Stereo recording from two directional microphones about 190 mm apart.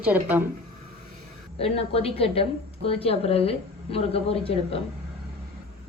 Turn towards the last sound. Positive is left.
turn(degrees=30)  # may be behind; listen again after turning